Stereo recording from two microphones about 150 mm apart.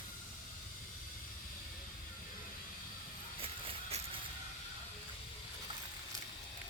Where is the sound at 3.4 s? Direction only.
40° right (ahead or behind).